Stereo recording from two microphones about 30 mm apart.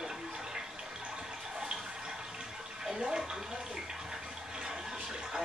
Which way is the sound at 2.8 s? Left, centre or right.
Right.